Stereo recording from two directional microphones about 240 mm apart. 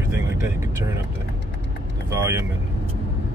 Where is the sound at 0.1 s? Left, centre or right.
Centre.